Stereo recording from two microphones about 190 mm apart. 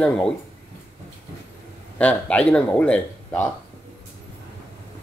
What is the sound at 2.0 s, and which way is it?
Speech, 5° left (ahead or behind).